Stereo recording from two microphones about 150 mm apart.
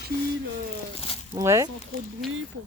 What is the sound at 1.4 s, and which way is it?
Speech, 20° right (ahead or behind).